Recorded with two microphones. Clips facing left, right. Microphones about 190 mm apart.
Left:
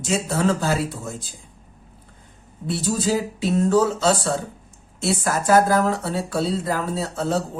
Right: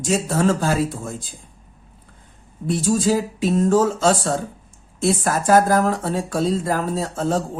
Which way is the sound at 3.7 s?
50° right (ahead or behind).